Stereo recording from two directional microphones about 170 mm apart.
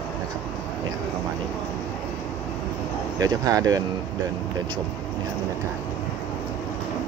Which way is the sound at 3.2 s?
20° right (ahead or behind).